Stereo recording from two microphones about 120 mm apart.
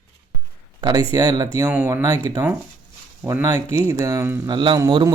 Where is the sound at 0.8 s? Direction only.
35° right (ahead or behind).